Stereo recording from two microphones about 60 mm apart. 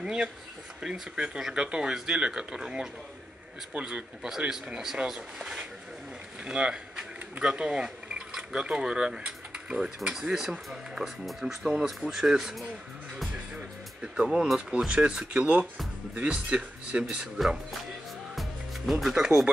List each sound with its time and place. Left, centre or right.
0.0 s speech: centre
13.6 s music: centre
14.8 s speech: centre
18.3 s music: centre